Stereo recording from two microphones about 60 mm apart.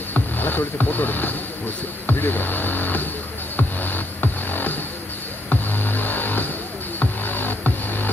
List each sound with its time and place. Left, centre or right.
0.1 s speech: left
3.5 s music: left